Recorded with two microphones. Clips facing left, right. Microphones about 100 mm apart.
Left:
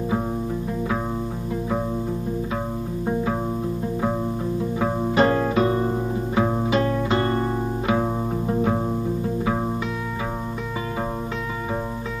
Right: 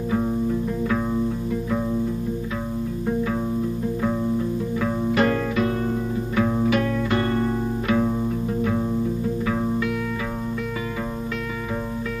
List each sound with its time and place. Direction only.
4.7 s music: 30° left (ahead or behind)
7.9 s music: 35° left (ahead or behind)